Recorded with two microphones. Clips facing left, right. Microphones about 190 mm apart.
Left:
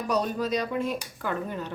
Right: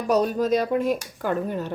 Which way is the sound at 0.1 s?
45° right (ahead or behind).